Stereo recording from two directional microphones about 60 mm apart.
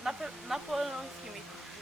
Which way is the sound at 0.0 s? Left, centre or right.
Centre.